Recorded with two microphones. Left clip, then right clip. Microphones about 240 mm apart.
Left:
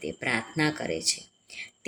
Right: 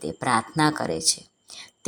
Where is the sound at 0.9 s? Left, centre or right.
Right.